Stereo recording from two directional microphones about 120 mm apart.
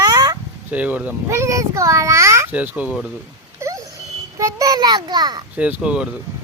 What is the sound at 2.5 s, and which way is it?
Speech, 15° right (ahead or behind).